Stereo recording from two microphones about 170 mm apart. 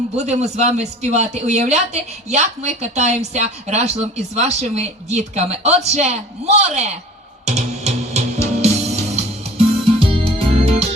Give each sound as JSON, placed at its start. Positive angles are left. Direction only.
{"t": 0.2, "sound": "speech", "side_deg": -40}
{"t": 7.4, "sound": "music", "side_deg": -40}